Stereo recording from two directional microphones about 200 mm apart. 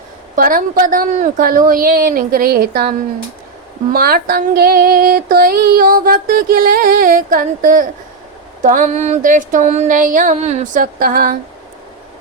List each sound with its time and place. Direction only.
0.3 s female singing: 45° right (ahead or behind)
3.9 s female singing: 50° right (ahead or behind)
8.6 s a sound: 40° right (ahead or behind)